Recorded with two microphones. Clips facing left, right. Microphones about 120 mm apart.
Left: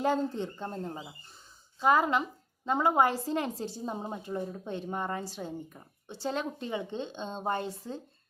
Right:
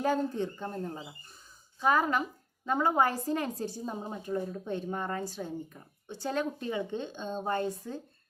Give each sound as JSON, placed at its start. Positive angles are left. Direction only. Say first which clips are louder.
{"t": 0.0, "sound": "a woman's voice", "louder": "even", "side_deg": 20}